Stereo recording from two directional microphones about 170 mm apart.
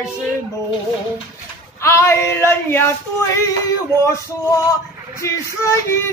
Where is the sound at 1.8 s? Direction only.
15° left (ahead or behind).